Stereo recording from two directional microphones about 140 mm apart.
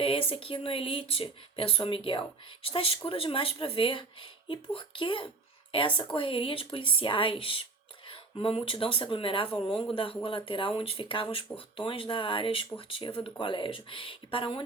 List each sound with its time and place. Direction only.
0.0 s speech: 40° left (ahead or behind)